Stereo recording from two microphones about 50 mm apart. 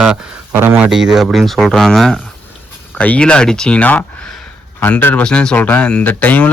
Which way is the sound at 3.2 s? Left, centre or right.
Centre.